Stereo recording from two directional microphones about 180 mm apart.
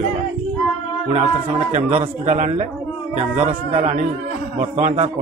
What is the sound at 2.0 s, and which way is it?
A man's voice, 40° right (ahead or behind).